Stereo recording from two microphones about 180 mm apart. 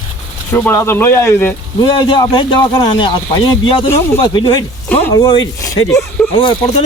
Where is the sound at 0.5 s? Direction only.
15° left (ahead or behind).